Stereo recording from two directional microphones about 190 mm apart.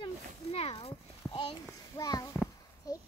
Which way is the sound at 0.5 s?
30° left (ahead or behind).